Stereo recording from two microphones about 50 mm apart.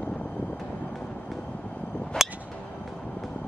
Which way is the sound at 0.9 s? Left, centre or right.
Centre.